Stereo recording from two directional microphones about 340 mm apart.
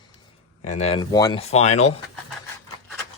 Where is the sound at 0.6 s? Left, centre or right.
Centre.